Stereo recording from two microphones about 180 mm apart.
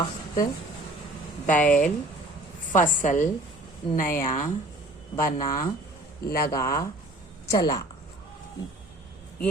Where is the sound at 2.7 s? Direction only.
45° left (ahead or behind).